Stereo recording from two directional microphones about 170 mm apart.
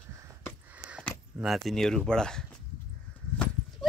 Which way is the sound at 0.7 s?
5° right (ahead or behind).